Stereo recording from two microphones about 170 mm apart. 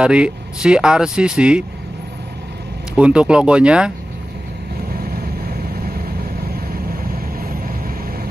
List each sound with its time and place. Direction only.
0.0 s speech: 5° right (ahead or behind)
3.0 s speech: 5° right (ahead or behind)
5.0 s vehicle: 65° right (ahead or behind)
7.3 s vehicle: 60° right (ahead or behind)